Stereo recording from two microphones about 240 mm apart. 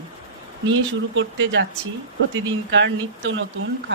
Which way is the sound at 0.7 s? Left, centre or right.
Right.